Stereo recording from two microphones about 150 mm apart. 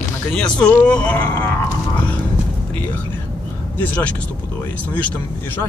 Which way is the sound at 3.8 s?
10° left (ahead or behind).